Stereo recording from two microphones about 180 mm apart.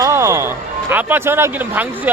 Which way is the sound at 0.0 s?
15° right (ahead or behind).